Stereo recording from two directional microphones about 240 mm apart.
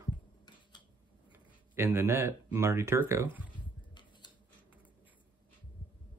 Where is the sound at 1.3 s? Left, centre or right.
Centre.